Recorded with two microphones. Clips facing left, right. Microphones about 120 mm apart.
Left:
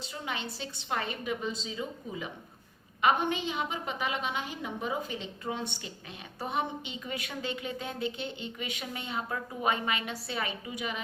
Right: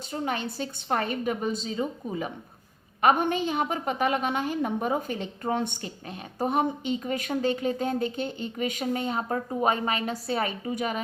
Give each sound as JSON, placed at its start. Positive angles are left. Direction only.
{"t": 0.1, "sound": "a woman's voice", "side_deg": -45}